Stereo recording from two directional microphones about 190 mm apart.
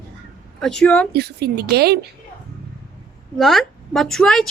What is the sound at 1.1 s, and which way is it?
Speech, 55° right (ahead or behind).